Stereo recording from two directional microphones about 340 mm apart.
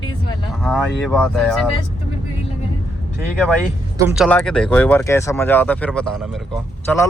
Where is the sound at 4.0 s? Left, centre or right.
Centre.